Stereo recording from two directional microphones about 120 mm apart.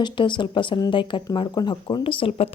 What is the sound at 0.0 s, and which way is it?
Speech, 40° left (ahead or behind).